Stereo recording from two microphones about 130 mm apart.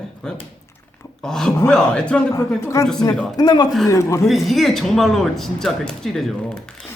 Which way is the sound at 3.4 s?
30° left (ahead or behind).